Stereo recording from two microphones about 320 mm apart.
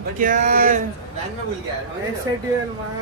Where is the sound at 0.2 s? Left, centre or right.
Right.